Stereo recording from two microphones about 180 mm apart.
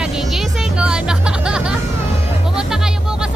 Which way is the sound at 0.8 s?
5° right (ahead or behind).